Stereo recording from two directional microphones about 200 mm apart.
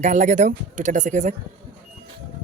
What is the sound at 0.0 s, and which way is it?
Speech, 40° right (ahead or behind).